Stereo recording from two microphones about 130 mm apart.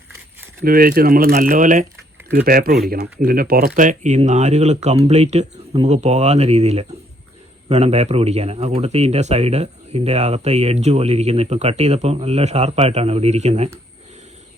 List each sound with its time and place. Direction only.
0.7 s speech: 90° right
2.7 s speech: centre (ahead or behind)
3.8 s speech: 75° right (ahead or behind)
4.3 s speech: 60° right (ahead or behind)